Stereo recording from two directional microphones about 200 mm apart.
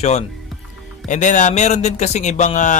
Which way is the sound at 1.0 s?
40° left (ahead or behind).